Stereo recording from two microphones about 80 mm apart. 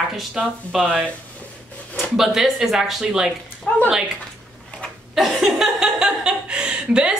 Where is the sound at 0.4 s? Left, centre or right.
Centre.